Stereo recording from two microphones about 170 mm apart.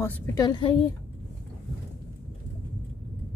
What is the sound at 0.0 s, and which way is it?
Speech, 15° left (ahead or behind).